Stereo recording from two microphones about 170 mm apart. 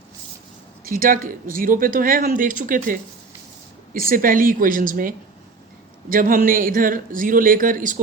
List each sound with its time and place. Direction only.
0.9 s speech: 55° right (ahead or behind)